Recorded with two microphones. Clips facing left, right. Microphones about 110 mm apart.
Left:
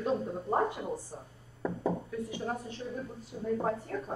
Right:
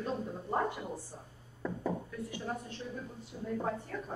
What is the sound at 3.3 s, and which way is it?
Speech, 45° left (ahead or behind).